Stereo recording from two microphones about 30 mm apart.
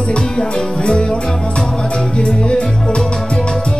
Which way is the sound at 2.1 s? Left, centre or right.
Left.